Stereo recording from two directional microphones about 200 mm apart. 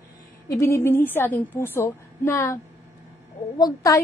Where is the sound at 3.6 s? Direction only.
20° left (ahead or behind).